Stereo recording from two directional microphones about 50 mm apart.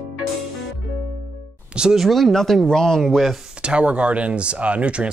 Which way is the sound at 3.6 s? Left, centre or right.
Right.